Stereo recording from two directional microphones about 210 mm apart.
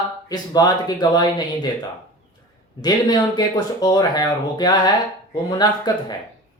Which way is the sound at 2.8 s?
20° left (ahead or behind).